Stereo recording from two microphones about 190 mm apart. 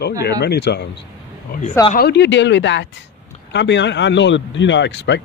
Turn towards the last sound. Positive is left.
turn(degrees=70)  # may be behind; listen again after turning